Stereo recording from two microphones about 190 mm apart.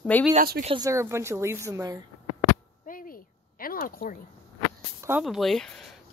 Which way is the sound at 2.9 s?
45° left (ahead or behind).